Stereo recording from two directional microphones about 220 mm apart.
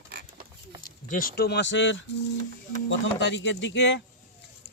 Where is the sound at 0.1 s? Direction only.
45° right (ahead or behind).